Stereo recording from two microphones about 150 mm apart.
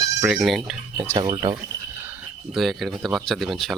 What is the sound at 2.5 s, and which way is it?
Speech, centre (ahead or behind).